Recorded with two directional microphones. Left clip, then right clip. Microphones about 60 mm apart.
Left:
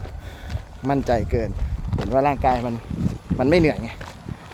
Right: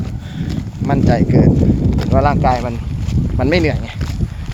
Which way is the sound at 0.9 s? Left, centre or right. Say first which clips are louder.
Right 5 dB; left.